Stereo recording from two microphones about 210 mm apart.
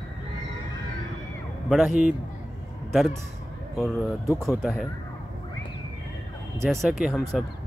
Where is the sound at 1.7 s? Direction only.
Centre (ahead or behind).